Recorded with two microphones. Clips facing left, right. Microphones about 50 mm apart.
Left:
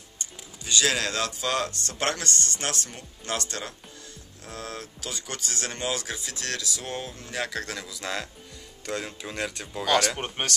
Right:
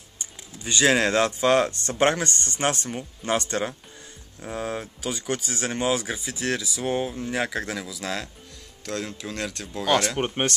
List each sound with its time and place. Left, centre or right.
0.7 s speech: right; by 9.8 s centre
10.2 s speech: right